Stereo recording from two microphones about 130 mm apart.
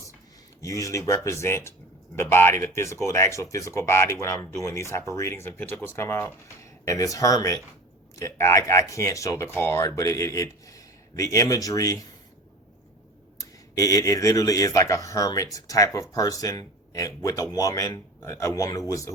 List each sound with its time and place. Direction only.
0.6 s speech: 25° left (ahead or behind)
13.4 s speech: 25° left (ahead or behind)